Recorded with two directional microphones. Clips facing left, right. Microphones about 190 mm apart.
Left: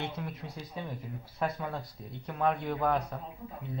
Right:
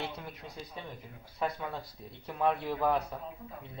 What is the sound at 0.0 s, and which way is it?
Speech, centre (ahead or behind).